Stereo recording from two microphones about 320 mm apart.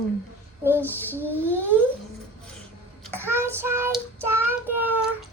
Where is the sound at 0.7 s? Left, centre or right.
Centre.